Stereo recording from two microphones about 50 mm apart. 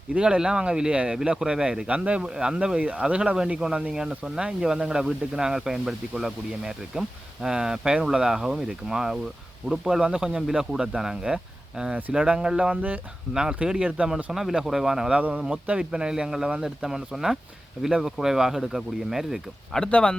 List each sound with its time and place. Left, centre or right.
0.1 s speech: right
1.9 s speech: right
3.6 s speech: centre
12.7 s speech: right
13.3 s speech: centre
14.3 s speech: centre
15.1 s speech: right; by 19.4 s centre
19.9 s speech: left